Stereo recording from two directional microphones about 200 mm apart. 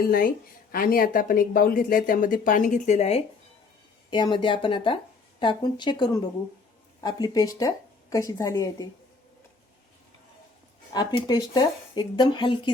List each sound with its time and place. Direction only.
0.0 s a woman's voice: 45° left (ahead or behind); by 8.9 s 15° left (ahead or behind)
10.9 s speech: 20° left (ahead or behind)